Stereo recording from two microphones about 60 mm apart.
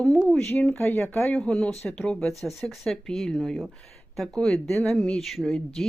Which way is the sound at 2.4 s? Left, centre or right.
Centre.